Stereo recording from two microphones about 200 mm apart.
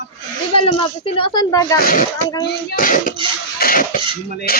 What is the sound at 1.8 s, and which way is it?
Speech, 45° left (ahead or behind).